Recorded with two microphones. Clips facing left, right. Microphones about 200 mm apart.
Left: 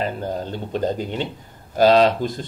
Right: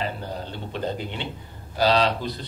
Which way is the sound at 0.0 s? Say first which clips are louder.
Left 5 dB; 45° left (ahead or behind).